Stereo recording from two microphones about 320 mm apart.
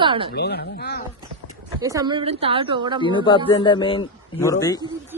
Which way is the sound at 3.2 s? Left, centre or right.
Centre.